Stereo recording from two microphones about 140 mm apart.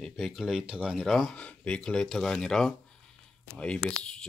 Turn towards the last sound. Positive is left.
turn(degrees=5)  # may be behind; listen again after turning